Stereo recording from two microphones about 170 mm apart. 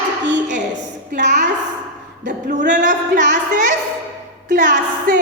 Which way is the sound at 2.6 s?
50° right (ahead or behind).